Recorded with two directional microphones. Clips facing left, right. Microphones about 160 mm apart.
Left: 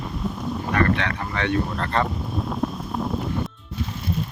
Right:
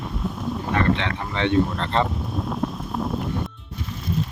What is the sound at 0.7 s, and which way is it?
Speech, 20° right (ahead or behind).